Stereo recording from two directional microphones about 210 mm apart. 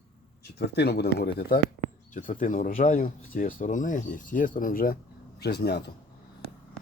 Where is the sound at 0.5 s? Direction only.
50° left (ahead or behind).